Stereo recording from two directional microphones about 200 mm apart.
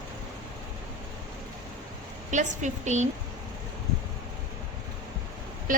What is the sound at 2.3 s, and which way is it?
Speech, 35° right (ahead or behind).